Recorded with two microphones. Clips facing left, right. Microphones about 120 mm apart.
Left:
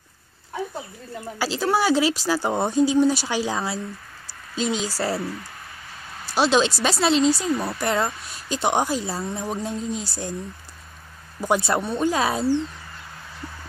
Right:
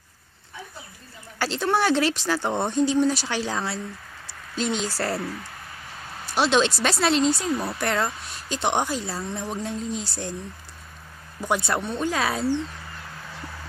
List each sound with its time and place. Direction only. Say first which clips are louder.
1.4 s speech: left 1 dB; 5° left (ahead or behind)
6.4 s speech: left 1 dB; 5° left (ahead or behind)
11.4 s speech: left 3 dB; 15° left (ahead or behind)
12.1 s speech: left 2 dB; 25° left (ahead or behind)